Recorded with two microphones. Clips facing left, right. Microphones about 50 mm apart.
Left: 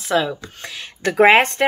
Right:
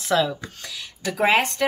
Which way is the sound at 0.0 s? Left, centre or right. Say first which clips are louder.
Left 2 dB; centre.